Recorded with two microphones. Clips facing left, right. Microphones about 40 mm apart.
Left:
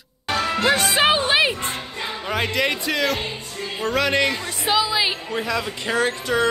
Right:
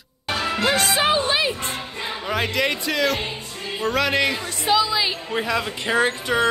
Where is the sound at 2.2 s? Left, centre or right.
Centre.